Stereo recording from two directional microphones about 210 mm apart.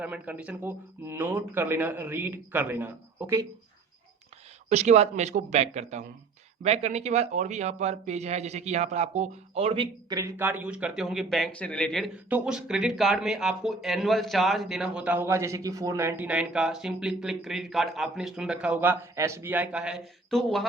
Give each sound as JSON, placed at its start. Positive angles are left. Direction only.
{"t": 0.0, "sound": "speech", "side_deg": -5}
{"t": 4.7, "sound": "a man's voice", "side_deg": -30}